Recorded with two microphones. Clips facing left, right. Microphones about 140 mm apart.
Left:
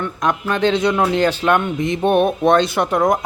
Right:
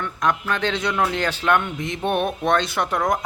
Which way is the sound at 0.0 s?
20° left (ahead or behind).